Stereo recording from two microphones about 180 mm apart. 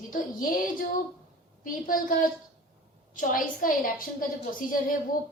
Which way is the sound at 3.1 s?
50° left (ahead or behind).